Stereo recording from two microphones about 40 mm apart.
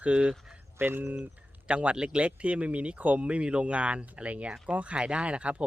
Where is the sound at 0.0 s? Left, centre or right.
Right.